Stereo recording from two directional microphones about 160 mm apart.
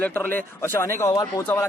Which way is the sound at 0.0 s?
10° left (ahead or behind).